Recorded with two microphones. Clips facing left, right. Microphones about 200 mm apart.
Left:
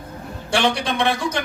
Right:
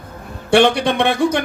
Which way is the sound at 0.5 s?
60° right (ahead or behind).